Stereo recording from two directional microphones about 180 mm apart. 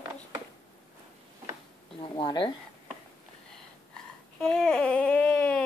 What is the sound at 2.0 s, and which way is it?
Speech, 30° left (ahead or behind).